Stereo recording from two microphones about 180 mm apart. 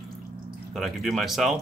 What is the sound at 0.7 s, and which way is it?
Speech, centre (ahead or behind).